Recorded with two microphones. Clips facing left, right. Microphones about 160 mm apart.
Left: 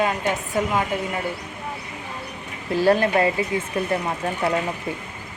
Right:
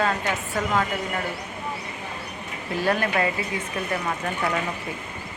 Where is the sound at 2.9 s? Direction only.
30° left (ahead or behind).